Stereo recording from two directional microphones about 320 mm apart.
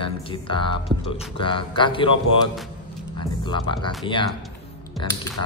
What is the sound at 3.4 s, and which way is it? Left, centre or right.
Speech, centre.